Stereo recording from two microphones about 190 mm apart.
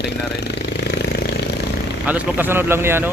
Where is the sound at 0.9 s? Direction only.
60° left (ahead or behind).